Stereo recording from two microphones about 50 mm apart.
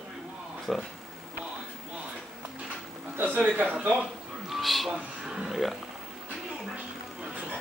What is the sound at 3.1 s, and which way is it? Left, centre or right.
Speech, right.